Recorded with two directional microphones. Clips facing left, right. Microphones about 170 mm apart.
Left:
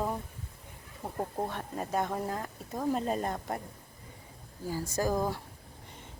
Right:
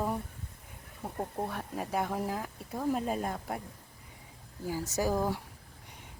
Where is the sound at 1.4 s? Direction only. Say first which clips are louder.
Even; 5° right (ahead or behind).